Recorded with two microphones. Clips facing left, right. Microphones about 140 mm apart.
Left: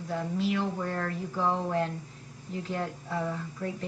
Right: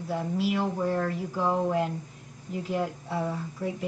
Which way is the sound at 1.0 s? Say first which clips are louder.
Right 2 dB; 10° right (ahead or behind).